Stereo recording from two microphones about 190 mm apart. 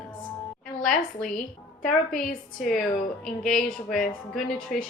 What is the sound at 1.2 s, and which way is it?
A woman's voice, 5° left (ahead or behind).